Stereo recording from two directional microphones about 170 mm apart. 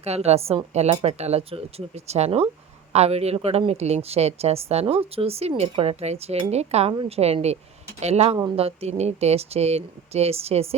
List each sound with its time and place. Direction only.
0.0 s a woman's voice: 40° right (ahead or behind)